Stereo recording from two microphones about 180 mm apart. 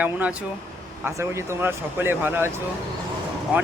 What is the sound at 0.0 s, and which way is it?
Speech, 10° right (ahead or behind).